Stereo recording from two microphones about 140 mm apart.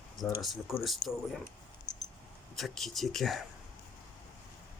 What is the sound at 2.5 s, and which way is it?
Speech, centre (ahead or behind).